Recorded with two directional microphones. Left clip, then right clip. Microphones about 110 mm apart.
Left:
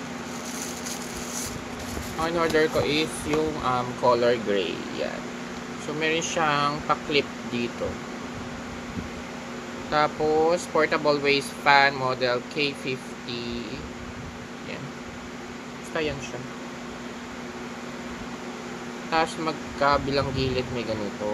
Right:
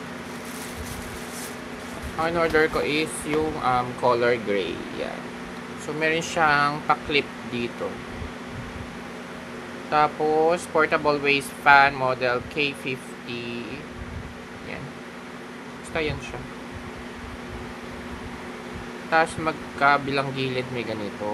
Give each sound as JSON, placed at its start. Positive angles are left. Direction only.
{"t": 2.2, "sound": "speech", "side_deg": -35}
{"t": 5.9, "sound": "speech", "side_deg": -40}
{"t": 9.8, "sound": "speech", "side_deg": -30}
{"t": 19.0, "sound": "speech", "side_deg": -30}